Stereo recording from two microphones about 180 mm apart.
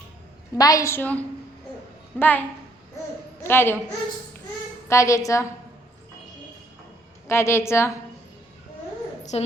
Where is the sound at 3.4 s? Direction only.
10° left (ahead or behind).